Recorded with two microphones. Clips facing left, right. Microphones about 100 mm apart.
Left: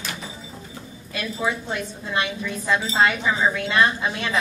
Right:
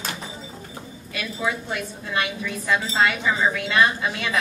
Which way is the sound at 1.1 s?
25° left (ahead or behind).